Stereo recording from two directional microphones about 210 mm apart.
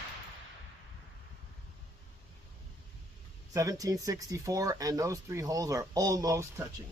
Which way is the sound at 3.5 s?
15° right (ahead or behind).